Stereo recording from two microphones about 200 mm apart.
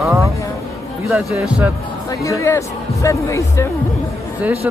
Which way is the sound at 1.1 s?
5° right (ahead or behind).